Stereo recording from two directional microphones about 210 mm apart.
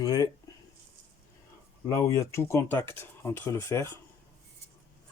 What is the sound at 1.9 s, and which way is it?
Speech, 15° left (ahead or behind).